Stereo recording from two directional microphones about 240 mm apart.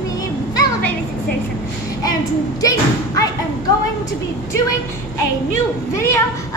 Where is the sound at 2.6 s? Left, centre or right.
Centre.